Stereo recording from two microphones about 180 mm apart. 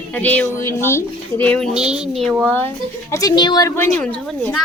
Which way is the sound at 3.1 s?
20° left (ahead or behind).